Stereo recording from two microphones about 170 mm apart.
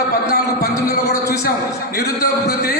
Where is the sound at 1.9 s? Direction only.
65° left (ahead or behind).